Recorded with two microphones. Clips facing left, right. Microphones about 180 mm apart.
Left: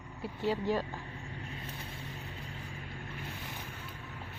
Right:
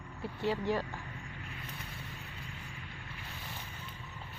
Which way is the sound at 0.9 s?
25° left (ahead or behind).